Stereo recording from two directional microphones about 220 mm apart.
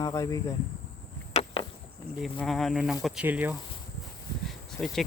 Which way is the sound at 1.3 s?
25° left (ahead or behind).